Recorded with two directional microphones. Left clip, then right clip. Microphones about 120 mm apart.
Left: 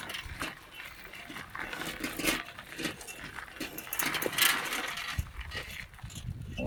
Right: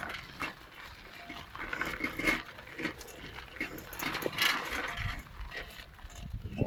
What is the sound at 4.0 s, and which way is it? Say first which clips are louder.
Vehicle: left 3 dB; 50° left (ahead or behind).